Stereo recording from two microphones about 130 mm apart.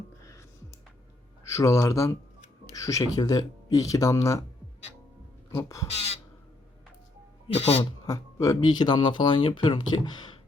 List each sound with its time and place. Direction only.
1.5 s speech: 20° left (ahead or behind)
5.5 s speech: 25° left (ahead or behind)
7.4 s speech: 50° left (ahead or behind)
8.0 s speech: 25° left (ahead or behind)